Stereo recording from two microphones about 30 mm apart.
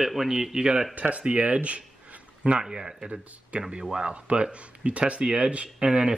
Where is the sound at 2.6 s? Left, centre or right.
Centre.